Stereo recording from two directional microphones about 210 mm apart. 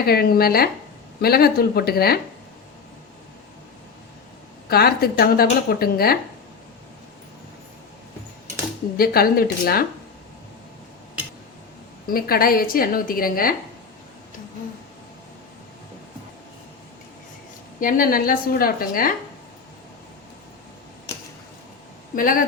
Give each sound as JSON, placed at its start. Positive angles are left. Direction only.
{"t": 0.0, "sound": "a woman's voice", "side_deg": 45}
{"t": 4.7, "sound": "a woman's voice", "side_deg": 50}
{"t": 9.0, "sound": "a woman's voice", "side_deg": 45}
{"t": 12.0, "sound": "a woman's voice", "side_deg": 45}
{"t": 17.7, "sound": "a woman's voice", "side_deg": 40}
{"t": 22.1, "sound": "speech", "side_deg": 40}